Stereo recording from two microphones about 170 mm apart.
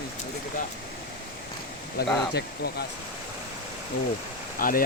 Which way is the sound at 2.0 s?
70° left (ahead or behind).